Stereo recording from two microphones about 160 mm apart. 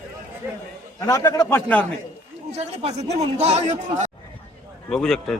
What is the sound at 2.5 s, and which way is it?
Speech, 40° right (ahead or behind).